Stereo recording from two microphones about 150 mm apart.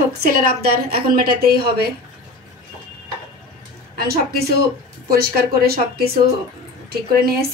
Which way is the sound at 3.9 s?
90° right.